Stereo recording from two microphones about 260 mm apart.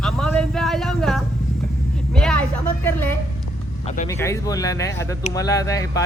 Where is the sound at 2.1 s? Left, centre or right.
Centre.